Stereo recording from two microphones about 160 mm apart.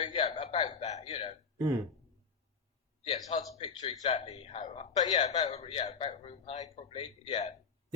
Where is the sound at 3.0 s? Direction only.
40° left (ahead or behind).